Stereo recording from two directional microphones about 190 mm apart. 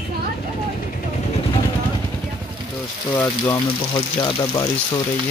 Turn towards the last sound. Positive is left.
turn(degrees=15)  # may be behind; listen again after turning